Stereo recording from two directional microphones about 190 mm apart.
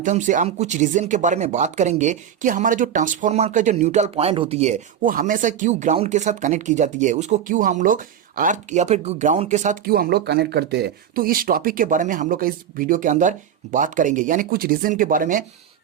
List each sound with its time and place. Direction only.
0.0 s speech: 40° right (ahead or behind)
9.8 s speech: 50° right (ahead or behind)